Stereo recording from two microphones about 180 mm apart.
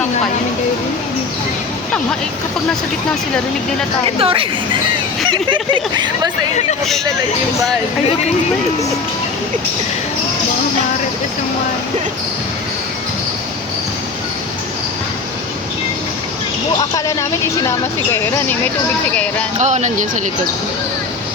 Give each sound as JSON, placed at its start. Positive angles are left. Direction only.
{"t": 4.2, "sound": "speech", "side_deg": -30}
{"t": 19.5, "sound": "speech", "side_deg": -40}